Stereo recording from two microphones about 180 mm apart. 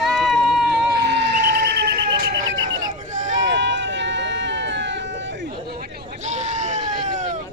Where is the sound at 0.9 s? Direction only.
65° right (ahead or behind).